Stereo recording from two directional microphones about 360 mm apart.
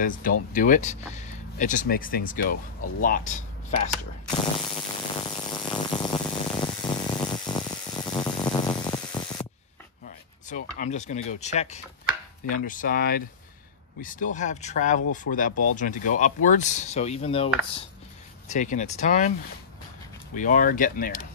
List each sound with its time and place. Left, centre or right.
0.0 s chopping: left
3.0 s ratchet: left
10.5 s chopping: centre
20.3 s chopping: left